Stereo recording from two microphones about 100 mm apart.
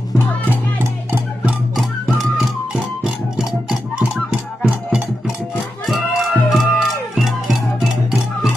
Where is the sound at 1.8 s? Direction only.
Centre (ahead or behind).